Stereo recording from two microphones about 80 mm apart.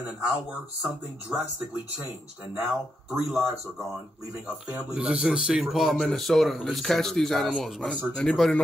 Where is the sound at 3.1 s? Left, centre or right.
Centre.